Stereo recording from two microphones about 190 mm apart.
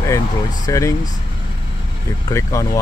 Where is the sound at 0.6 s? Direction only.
15° left (ahead or behind).